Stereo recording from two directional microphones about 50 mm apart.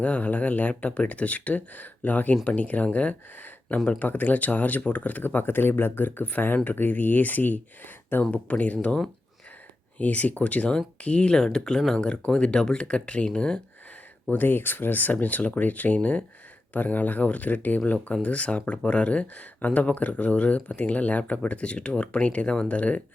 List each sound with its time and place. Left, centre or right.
0.0 s speech: left
10.0 s speech: left
14.3 s speech: left